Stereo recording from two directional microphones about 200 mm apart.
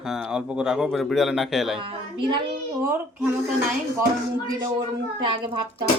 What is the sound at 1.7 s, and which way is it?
Speech, 25° right (ahead or behind).